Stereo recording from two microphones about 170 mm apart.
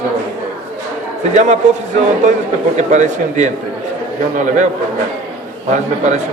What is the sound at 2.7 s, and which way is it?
Speech, 45° right (ahead or behind).